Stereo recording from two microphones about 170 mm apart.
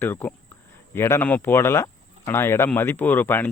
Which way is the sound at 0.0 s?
10° left (ahead or behind).